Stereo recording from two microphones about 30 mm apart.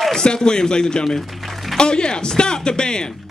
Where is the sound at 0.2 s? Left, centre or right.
Left.